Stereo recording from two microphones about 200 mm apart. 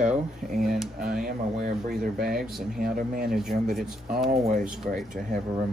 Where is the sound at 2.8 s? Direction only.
45° right (ahead or behind).